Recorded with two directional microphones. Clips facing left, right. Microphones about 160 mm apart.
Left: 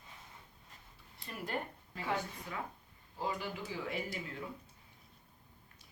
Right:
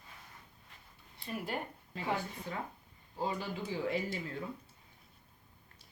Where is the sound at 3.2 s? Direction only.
30° right (ahead or behind).